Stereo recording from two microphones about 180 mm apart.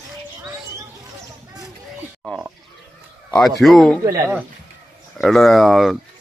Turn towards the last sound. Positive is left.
turn(degrees=0)  # may be behind; listen again after turning